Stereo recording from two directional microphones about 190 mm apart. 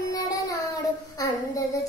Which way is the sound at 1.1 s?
20° left (ahead or behind).